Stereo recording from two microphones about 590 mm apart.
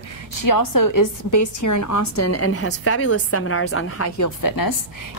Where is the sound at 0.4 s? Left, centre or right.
Left.